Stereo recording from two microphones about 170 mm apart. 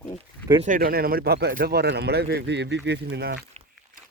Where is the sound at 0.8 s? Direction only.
60° right (ahead or behind); by 3.4 s 80° right.